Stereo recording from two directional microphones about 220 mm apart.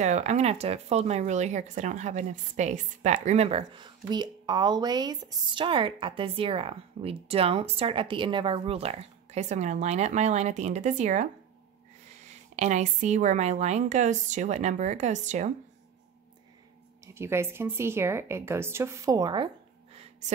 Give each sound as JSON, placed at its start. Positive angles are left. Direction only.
{"t": 0.0, "sound": "a woman's voice", "side_deg": -30}
{"t": 17.0, "sound": "speech", "side_deg": -10}